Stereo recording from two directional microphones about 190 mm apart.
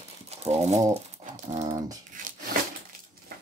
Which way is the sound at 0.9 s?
40° right (ahead or behind).